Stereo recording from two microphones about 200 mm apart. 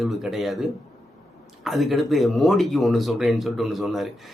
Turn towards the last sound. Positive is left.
turn(degrees=0)  # may be behind; listen again after turning